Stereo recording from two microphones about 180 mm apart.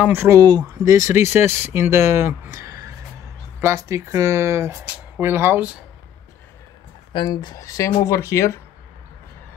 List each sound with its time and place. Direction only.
0.0 s speech: 10° right (ahead or behind)
7.1 s speech: 25° left (ahead or behind)